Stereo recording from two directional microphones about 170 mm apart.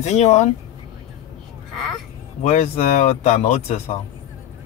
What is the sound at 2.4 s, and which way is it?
Speech, 45° left (ahead or behind).